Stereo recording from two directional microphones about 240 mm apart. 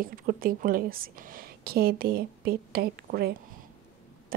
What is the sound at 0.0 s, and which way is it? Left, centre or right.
Speech, right.